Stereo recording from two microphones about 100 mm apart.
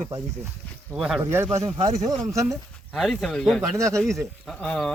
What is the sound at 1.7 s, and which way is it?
Speech, 90° right.